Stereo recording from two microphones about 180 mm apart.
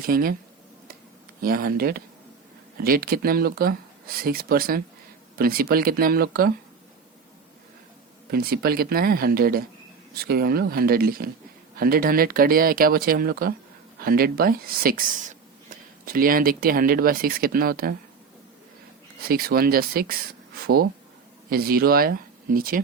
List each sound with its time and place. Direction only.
0.0 s speech: 55° right (ahead or behind)
1.4 s speech: 55° right (ahead or behind)
8.3 s speech: 60° right (ahead or behind)
19.3 s speech: 55° right (ahead or behind)